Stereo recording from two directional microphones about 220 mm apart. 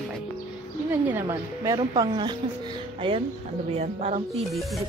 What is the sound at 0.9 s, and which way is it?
A woman's voice, 10° right (ahead or behind).